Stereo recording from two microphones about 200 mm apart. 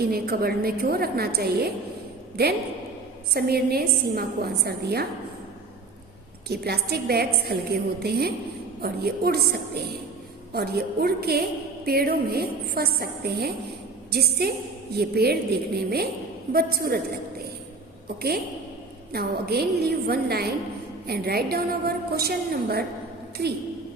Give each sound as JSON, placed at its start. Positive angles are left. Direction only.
{"t": 0.0, "sound": "a woman's voice", "side_deg": -50}
{"t": 6.5, "sound": "a woman's voice", "side_deg": -50}
{"t": 18.2, "sound": "a woman's voice", "side_deg": -50}